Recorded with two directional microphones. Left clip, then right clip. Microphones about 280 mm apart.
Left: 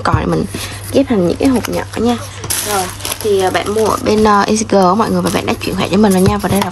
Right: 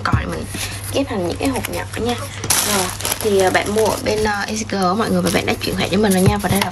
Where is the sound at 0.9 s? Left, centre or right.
Left.